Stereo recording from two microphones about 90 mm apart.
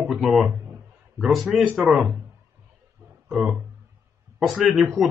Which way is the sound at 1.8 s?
5° right (ahead or behind).